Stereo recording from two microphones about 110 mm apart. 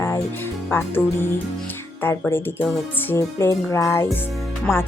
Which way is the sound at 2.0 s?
20° left (ahead or behind).